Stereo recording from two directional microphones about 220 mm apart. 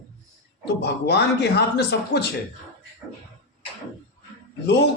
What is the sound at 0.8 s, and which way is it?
A man's voice, 50° left (ahead or behind).